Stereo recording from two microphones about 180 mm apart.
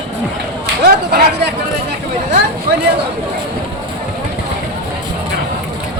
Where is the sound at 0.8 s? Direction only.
70° right (ahead or behind).